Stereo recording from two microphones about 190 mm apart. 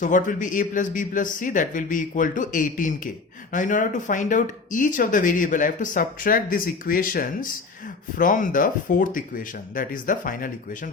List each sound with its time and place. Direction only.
0.0 s speech: 40° left (ahead or behind)